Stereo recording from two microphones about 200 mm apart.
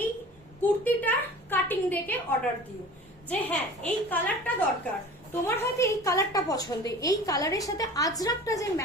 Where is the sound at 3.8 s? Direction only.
10° left (ahead or behind).